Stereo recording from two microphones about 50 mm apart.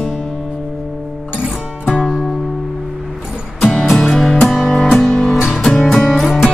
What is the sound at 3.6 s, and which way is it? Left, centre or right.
Music, centre.